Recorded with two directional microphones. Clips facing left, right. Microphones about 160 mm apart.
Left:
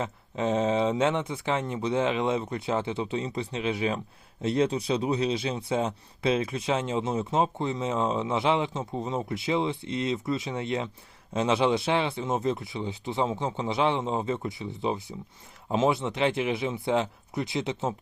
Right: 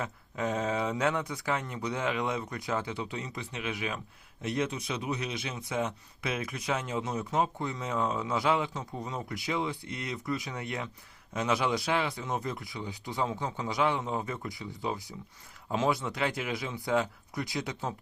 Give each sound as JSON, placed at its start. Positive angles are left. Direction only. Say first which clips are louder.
{"t": 0.0, "sound": "speech", "louder": "left 4 dB", "side_deg": 25}